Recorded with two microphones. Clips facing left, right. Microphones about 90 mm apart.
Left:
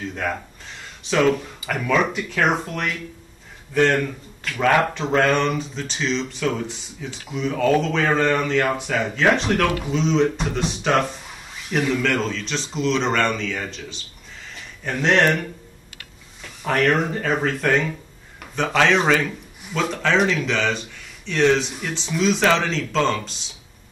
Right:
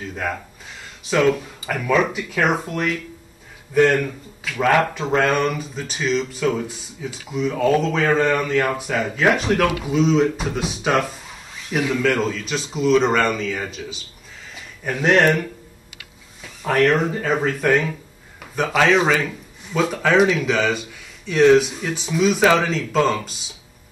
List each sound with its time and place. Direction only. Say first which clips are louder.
0.1 s speech: even; 5° right (ahead or behind)
14.5 s a sound: right 1 dB; 10° right (ahead or behind)
16.6 s speech: right 2 dB; 5° right (ahead or behind)